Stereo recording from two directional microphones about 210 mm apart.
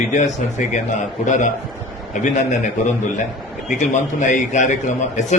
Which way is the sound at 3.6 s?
35° left (ahead or behind).